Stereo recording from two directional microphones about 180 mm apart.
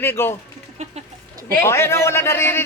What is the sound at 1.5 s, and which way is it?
Speech, 15° left (ahead or behind).